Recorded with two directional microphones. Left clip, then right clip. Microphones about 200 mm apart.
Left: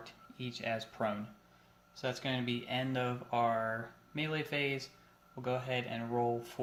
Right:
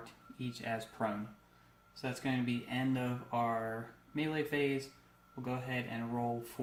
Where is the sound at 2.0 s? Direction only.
40° left (ahead or behind).